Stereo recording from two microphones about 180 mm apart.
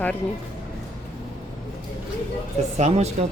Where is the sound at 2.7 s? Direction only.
35° right (ahead or behind).